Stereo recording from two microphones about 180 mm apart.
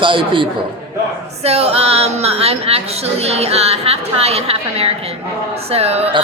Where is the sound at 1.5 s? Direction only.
35° right (ahead or behind).